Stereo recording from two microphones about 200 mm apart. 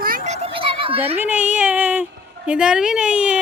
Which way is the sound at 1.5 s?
5° right (ahead or behind).